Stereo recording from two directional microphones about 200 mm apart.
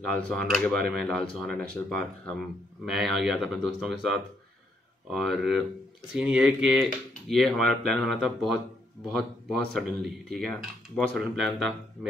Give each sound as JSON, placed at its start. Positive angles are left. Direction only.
{"t": 0.0, "sound": "mechanisms", "side_deg": 0}